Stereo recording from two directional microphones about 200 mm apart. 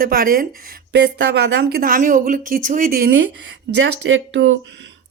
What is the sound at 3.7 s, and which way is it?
Speech, 70° right (ahead or behind).